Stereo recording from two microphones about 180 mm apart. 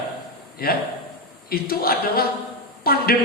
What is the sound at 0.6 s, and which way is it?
A man's voice, 55° left (ahead or behind).